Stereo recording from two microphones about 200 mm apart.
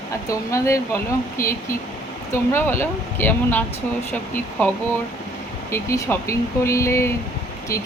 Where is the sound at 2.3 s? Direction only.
10° left (ahead or behind).